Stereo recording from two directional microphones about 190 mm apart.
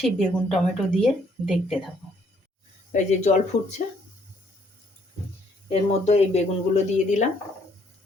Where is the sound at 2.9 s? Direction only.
35° left (ahead or behind).